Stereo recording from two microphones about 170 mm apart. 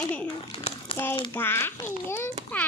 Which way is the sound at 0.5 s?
35° left (ahead or behind).